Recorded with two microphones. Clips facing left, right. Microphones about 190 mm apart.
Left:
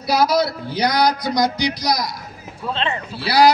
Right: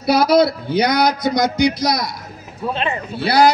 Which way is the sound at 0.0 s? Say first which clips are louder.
Right 4 dB; 55° right (ahead or behind).